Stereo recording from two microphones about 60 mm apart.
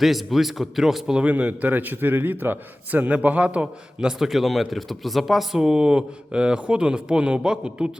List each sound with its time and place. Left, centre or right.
0.0 s speech: centre
1.2 s a man's voice: right
4.2 s speech: centre